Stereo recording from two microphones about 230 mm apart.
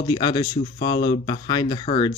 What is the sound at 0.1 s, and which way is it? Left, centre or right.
Speech, centre.